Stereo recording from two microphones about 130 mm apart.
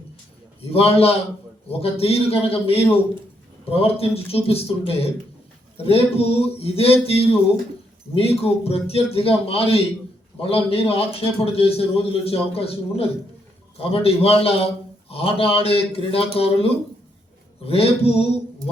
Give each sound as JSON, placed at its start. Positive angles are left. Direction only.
{"t": 0.6, "sound": "a man's voice", "side_deg": 50}